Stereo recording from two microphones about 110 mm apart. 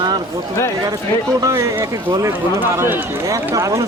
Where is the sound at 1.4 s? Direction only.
25° right (ahead or behind).